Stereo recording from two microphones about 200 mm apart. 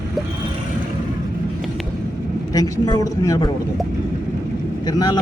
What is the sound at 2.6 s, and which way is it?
Speech, 20° left (ahead or behind).